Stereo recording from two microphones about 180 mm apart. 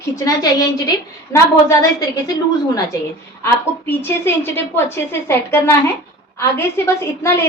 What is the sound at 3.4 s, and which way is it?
A woman's voice, 10° left (ahead or behind).